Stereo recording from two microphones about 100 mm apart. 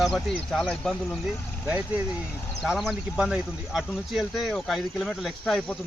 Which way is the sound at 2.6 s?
5° right (ahead or behind).